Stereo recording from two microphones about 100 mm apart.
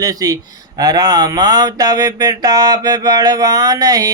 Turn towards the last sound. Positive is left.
turn(degrees=-35)  # may be behind; listen again after turning